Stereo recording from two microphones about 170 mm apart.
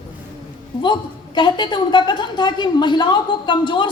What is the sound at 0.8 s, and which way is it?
Speech, 25° left (ahead or behind).